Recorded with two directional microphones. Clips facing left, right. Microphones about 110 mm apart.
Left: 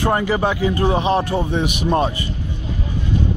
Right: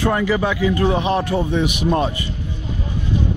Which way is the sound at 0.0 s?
35° left (ahead or behind).